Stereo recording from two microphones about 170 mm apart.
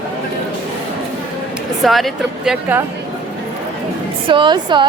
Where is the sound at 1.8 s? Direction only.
Centre (ahead or behind).